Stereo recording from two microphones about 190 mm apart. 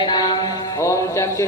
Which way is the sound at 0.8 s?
15° left (ahead or behind).